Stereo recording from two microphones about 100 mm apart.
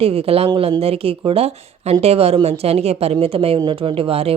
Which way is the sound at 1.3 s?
85° right.